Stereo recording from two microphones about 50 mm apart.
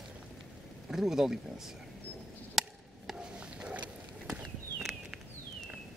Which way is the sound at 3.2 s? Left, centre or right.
Centre.